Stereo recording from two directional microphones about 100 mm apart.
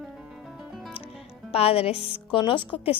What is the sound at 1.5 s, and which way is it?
Speech, 85° left.